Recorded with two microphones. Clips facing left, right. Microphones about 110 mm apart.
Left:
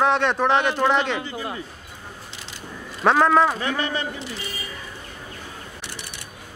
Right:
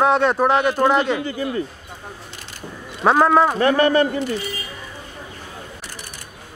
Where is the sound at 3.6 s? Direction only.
55° right (ahead or behind).